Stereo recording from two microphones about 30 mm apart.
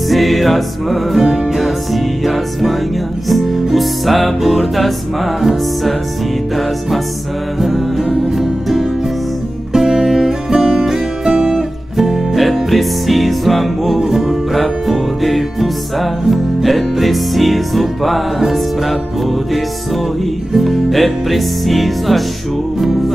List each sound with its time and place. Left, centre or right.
0.1 s music: centre
7.5 s music: centre
10.5 s music: right
11.3 s music: centre
12.0 s music: centre